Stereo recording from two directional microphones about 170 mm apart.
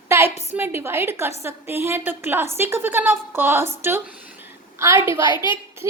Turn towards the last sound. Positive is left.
turn(degrees=25)  # may be behind; listen again after turning